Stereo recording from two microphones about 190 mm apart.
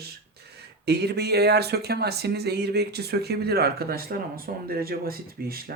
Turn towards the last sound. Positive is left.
turn(degrees=-50)  # may be behind; listen again after turning